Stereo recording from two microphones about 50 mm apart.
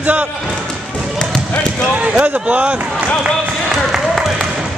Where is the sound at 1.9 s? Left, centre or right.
Right.